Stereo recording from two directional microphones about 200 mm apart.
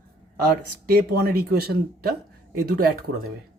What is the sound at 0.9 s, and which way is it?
Speech, 50° right (ahead or behind).